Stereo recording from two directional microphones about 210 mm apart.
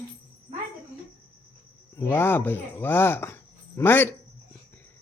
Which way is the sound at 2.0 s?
10° left (ahead or behind).